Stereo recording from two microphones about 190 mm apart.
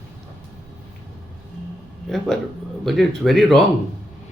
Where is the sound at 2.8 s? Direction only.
Centre (ahead or behind).